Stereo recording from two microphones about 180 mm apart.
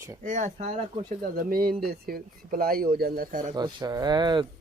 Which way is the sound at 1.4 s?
55° right (ahead or behind).